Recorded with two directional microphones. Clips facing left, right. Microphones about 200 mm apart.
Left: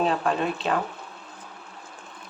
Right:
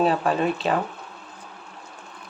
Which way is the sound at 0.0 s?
5° right (ahead or behind).